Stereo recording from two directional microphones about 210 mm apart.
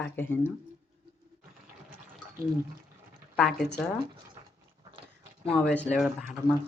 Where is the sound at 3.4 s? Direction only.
Centre (ahead or behind).